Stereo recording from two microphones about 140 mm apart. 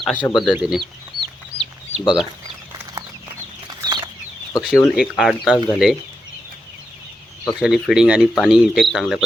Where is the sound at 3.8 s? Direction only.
30° right (ahead or behind).